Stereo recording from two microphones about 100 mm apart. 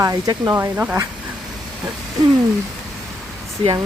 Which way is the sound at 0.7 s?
15° right (ahead or behind).